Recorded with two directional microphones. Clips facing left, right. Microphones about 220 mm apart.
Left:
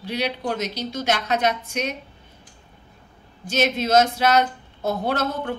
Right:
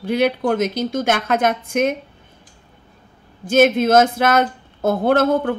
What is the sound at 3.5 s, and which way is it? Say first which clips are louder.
Speech: right 7 dB; 50° right (ahead or behind).